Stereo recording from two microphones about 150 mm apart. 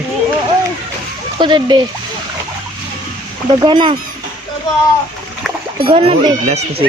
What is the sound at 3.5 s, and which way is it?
Speech, 30° right (ahead or behind).